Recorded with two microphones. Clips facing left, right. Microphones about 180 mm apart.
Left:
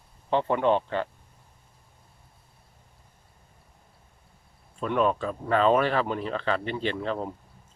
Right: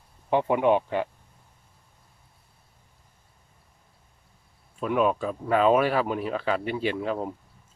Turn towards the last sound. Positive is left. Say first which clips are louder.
# right 2 dB
turn(degrees=-5)  # may be behind; listen again after turning